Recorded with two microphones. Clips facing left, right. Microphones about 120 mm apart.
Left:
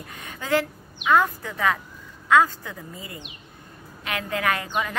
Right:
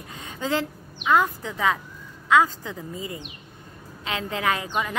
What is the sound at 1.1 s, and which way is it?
A woman's voice, 15° right (ahead or behind).